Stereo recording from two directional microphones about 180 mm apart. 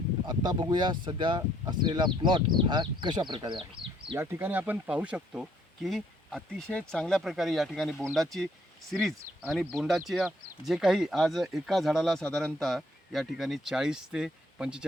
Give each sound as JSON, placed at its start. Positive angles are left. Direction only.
{"t": 0.3, "sound": "speech", "side_deg": -25}
{"t": 4.2, "sound": "speech", "side_deg": -15}